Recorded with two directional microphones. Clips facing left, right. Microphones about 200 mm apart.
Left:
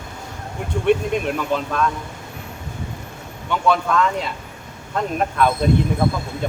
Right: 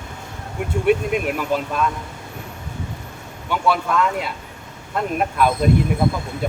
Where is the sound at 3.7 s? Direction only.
5° right (ahead or behind).